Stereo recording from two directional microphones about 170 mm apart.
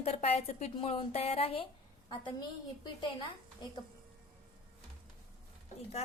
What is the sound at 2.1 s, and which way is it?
Speech, 25° left (ahead or behind).